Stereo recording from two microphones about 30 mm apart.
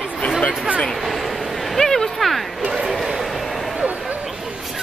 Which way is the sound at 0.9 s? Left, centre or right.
Centre.